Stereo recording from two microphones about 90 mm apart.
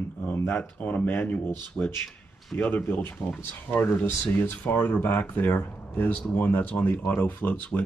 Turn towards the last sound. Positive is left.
turn(degrees=20)  # may be behind; listen again after turning